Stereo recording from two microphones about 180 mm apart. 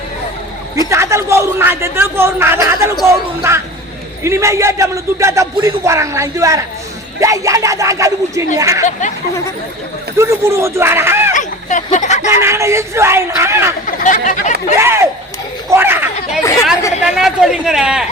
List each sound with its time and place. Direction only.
0.9 s a man's voice: 15° right (ahead or behind)
8.8 s speech: 45° left (ahead or behind)
10.2 s a man's voice: 15° right (ahead or behind)
11.3 s a sound: 45° left (ahead or behind)
12.3 s a man's voice: 15° right (ahead or behind)
13.8 s speech: 45° left (ahead or behind)
14.8 s a man's voice: 15° right (ahead or behind)
16.4 s speech: 15° left (ahead or behind)
17.0 s speech: centre (ahead or behind)